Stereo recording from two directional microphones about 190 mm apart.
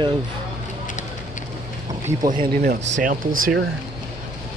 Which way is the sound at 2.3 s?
45° right (ahead or behind).